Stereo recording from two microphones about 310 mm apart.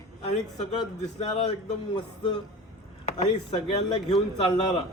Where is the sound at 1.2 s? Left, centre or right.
Left.